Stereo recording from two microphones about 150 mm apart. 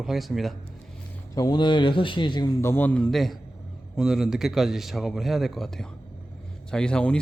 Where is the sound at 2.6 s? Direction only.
15° left (ahead or behind).